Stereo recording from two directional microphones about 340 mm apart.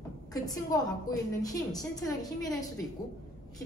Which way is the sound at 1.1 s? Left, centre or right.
Centre.